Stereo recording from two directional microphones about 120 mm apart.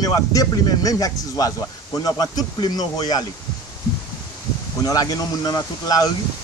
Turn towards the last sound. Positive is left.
turn(degrees=30)  # may be behind; listen again after turning